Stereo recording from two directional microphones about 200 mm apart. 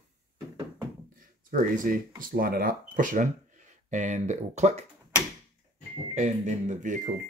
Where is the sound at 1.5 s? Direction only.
45° right (ahead or behind).